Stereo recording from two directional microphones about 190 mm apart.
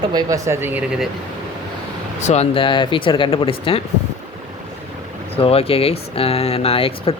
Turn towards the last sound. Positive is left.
turn(degrees=30)  # may be behind; listen again after turning